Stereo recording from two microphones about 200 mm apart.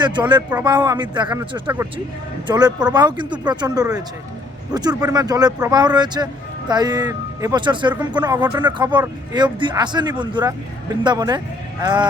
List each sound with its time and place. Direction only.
0.0 s speech: 20° right (ahead or behind)